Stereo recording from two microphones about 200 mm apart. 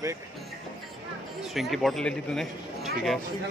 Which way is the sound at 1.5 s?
Centre (ahead or behind).